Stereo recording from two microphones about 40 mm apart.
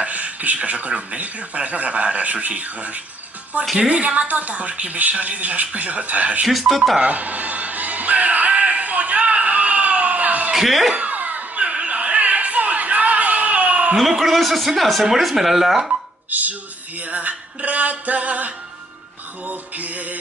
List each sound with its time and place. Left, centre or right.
0.0 s speech: right
6.4 s speech: centre
7.0 s music: right
10.5 s speech: centre
11.0 s a sound: right
14.1 s speech: centre
16.3 s a sound: right
17.0 s speech: right